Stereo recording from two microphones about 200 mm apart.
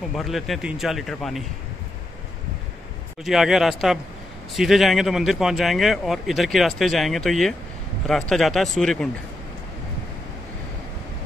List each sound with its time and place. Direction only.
0.1 s a man's voice: centre (ahead or behind)
3.3 s a man's voice: centre (ahead or behind)